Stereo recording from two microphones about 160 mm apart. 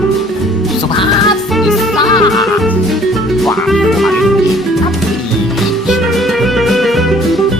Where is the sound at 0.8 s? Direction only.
30° left (ahead or behind).